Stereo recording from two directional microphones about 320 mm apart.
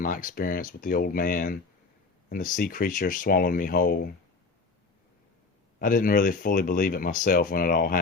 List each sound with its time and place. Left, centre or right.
0.0 s speech: left
5.8 s speech: left